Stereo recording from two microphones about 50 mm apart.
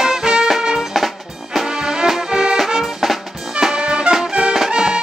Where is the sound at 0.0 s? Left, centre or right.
Centre.